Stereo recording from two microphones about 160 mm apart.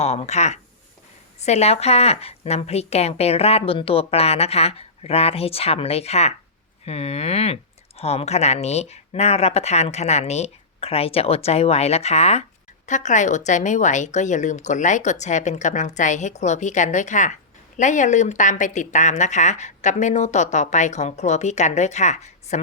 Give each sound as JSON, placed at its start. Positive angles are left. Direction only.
{"t": 0.0, "sound": "a woman's voice", "side_deg": 40}